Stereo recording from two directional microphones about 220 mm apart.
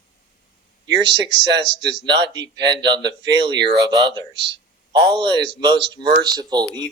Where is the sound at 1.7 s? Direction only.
20° right (ahead or behind).